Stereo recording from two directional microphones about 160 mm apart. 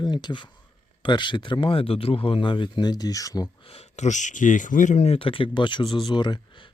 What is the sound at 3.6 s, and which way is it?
Speech, 40° left (ahead or behind).